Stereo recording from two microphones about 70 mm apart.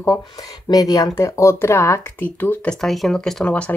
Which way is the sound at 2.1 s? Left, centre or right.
Left.